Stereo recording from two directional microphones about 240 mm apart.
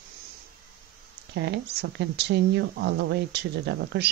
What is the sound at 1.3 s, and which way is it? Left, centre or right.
Speech, right.